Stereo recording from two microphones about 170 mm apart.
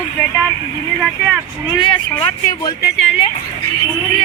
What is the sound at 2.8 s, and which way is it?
Speech, 90° left.